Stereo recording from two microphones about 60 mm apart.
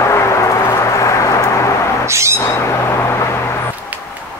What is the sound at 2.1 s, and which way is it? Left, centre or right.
Owl, right.